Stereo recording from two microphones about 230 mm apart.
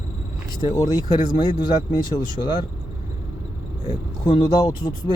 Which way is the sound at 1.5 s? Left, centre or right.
Left.